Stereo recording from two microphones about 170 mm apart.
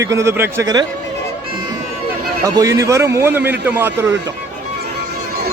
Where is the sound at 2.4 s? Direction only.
20° right (ahead or behind).